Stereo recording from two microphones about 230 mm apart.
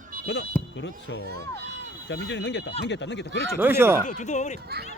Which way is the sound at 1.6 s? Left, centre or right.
Right.